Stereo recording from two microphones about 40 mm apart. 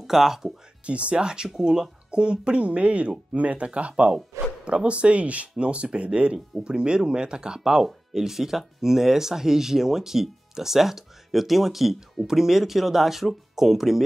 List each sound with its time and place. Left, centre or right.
0.0 s speech: centre
0.8 s speech: right; by 14.0 s centre